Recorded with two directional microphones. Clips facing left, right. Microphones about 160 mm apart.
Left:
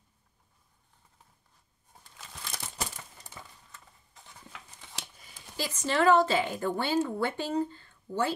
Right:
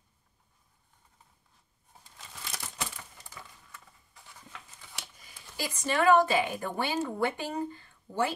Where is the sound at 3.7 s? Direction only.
20° left (ahead or behind).